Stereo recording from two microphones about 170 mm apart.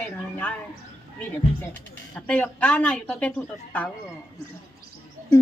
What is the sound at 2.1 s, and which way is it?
A woman's voice, 10° left (ahead or behind).